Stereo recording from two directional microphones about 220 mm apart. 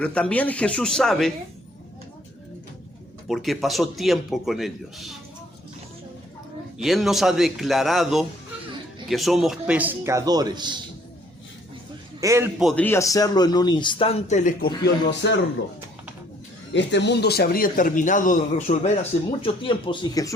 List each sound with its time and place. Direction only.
0.0 s a man's voice: 5° left (ahead or behind)
3.2 s a man's voice: centre (ahead or behind)
6.7 s a man's voice: centre (ahead or behind); by 10.8 s 20° right (ahead or behind)
12.2 s a man's voice: 15° right (ahead or behind)
12.5 s a man's voice: 5° left (ahead or behind); by 14.7 s 35° left (ahead or behind)
15.2 s speech: 55° left (ahead or behind)
16.7 s a man's voice: 50° left (ahead or behind); by 20.3 s 20° left (ahead or behind)